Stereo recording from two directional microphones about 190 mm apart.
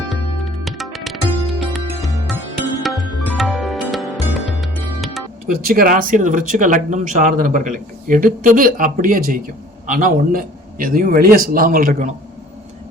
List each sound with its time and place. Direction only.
0.1 s music: centre (ahead or behind)
5.5 s speech: 50° right (ahead or behind)